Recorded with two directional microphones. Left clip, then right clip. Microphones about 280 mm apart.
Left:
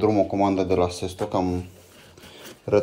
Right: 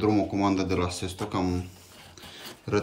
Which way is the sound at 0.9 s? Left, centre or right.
Right.